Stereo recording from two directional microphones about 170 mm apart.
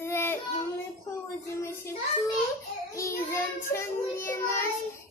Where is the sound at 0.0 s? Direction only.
15° left (ahead or behind).